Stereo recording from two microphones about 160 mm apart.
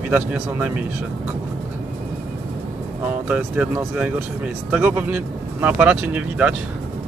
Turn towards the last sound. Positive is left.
turn(degrees=-10)  # may be behind; listen again after turning